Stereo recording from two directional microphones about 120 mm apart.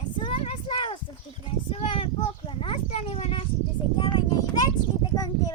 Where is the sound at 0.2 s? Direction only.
50° left (ahead or behind).